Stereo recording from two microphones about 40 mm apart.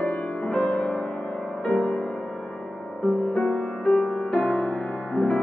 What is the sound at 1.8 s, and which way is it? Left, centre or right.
Music, left.